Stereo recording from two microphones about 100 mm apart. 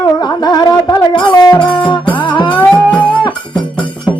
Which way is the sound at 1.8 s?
50° left (ahead or behind).